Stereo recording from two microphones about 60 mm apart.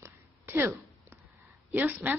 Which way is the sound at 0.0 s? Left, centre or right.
Right.